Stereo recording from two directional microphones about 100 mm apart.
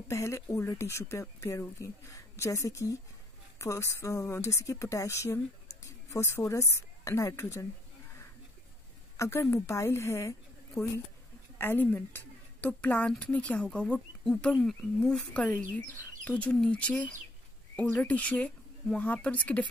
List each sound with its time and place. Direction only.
0.1 s speech: 30° left (ahead or behind)
9.1 s a woman's voice: 30° left (ahead or behind); by 17.0 s 10° left (ahead or behind)
18.0 s speech: 15° left (ahead or behind)